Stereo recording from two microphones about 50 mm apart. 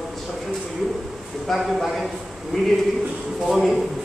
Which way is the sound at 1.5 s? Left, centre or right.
Centre.